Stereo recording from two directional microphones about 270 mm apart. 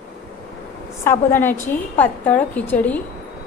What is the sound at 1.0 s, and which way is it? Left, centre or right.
A woman's voice, centre.